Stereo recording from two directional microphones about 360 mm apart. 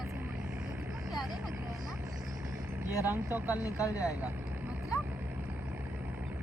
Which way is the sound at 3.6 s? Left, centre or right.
Centre.